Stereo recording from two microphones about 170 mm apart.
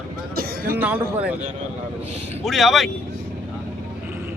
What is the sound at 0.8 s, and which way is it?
Speech, 10° right (ahead or behind).